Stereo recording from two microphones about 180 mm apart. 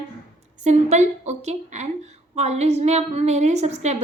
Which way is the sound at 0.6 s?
40° right (ahead or behind).